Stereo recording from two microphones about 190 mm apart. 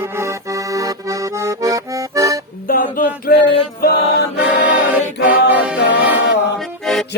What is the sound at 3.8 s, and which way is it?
Chant, 55° left (ahead or behind).